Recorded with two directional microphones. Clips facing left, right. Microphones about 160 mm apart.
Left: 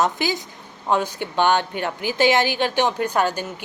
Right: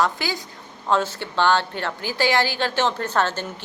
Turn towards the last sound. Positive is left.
turn(degrees=10)  # may be behind; listen again after turning